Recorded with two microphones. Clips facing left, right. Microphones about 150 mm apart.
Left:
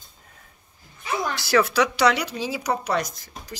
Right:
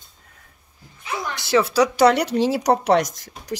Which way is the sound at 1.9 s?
50° right (ahead or behind).